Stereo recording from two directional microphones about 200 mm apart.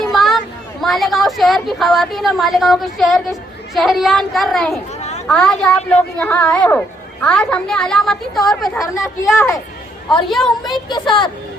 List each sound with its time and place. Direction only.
0.0 s a sound: centre (ahead or behind)
0.8 s a woman's voice: centre (ahead or behind)
9.0 s speech: 15° left (ahead or behind)
10.2 s a woman's voice: centre (ahead or behind)
10.7 s speech: 20° left (ahead or behind)